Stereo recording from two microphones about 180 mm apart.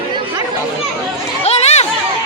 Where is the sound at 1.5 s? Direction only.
35° left (ahead or behind).